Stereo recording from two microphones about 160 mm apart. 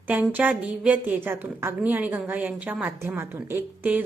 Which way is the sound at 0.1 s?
10° right (ahead or behind).